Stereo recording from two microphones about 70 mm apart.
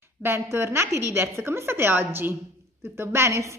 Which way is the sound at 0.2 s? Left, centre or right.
Right.